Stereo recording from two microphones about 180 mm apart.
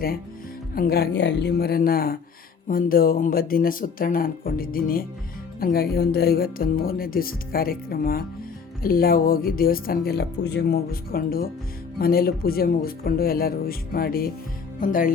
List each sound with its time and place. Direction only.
0.8 s speech: 60° left (ahead or behind)